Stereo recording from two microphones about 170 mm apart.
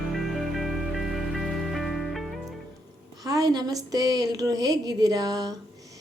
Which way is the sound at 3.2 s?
20° right (ahead or behind).